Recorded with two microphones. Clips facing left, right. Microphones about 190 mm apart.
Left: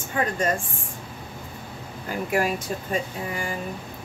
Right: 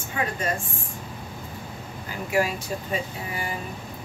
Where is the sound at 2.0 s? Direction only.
50° left (ahead or behind).